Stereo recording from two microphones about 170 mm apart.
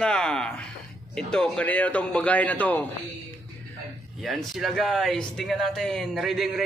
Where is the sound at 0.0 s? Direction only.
5° left (ahead or behind).